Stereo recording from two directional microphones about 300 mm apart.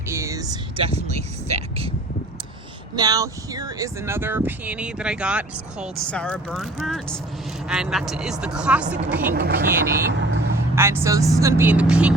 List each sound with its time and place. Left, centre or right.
0.1 s a sound: centre
2.9 s speech: centre
9.3 s speech: right
10.8 s speech: centre